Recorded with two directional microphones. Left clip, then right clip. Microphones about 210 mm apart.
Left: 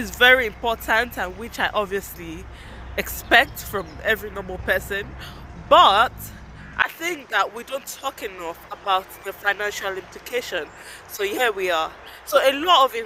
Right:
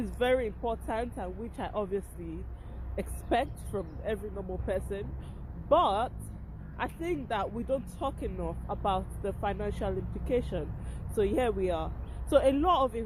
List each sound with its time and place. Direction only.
0.0 s speech: centre (ahead or behind)
9.4 s speech: centre (ahead or behind)